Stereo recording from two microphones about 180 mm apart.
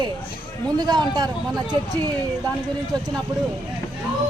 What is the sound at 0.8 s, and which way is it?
Speech, 25° right (ahead or behind).